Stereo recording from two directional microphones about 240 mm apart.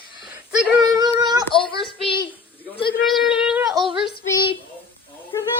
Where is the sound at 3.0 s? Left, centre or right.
Centre.